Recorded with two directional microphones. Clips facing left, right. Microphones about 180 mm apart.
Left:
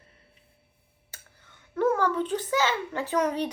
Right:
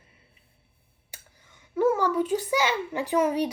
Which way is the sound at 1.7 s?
10° right (ahead or behind).